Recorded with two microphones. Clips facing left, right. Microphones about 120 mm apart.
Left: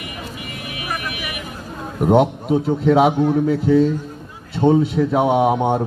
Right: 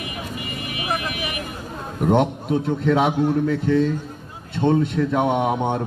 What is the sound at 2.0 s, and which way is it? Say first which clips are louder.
A man's voice: left 4 dB; 5° left (ahead or behind).